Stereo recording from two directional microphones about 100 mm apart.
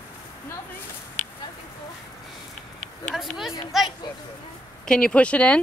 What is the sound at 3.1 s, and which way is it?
Speech, 5° right (ahead or behind).